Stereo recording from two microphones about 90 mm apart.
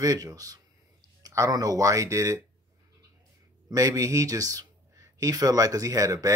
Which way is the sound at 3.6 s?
35° right (ahead or behind).